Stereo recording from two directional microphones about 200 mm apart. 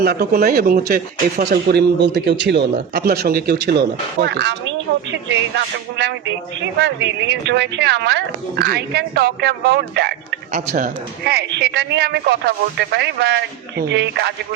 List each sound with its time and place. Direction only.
0.0 s a man's voice: 50° right (ahead or behind)